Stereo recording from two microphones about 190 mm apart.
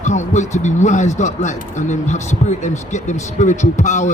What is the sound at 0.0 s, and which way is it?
Speech, 40° left (ahead or behind).